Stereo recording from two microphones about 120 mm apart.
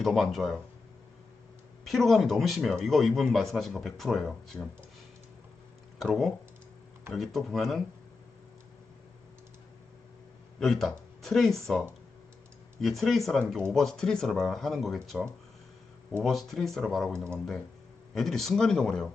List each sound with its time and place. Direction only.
0.0 s speech: centre (ahead or behind)
1.8 s speech: centre (ahead or behind)
6.0 s speech: 5° left (ahead or behind)
10.6 s speech: centre (ahead or behind)
12.8 s speech: centre (ahead or behind)